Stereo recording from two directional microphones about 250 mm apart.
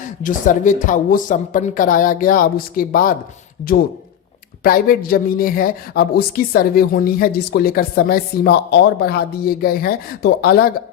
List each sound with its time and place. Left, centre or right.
0.0 s speech: left
4.6 s speech: left